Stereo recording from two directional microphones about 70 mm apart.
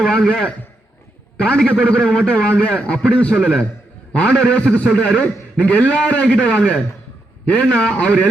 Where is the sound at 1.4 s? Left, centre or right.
Centre.